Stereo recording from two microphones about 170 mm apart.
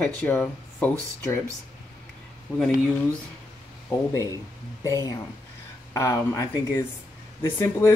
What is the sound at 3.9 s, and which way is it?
Speech, 15° left (ahead or behind).